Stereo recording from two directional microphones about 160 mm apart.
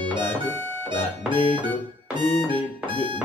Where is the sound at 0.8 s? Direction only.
30° right (ahead or behind).